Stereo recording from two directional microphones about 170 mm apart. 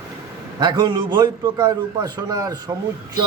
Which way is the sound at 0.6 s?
25° right (ahead or behind).